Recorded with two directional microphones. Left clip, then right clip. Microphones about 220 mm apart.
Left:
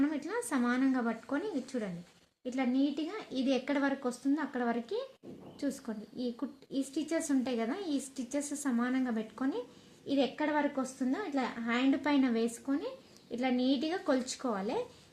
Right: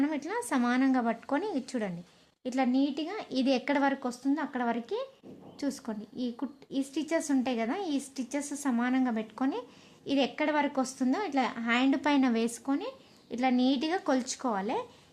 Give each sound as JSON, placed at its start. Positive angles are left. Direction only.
{"t": 0.0, "sound": "a woman's voice", "side_deg": -35}